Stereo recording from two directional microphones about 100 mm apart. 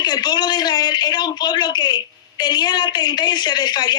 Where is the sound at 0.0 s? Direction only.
45° left (ahead or behind).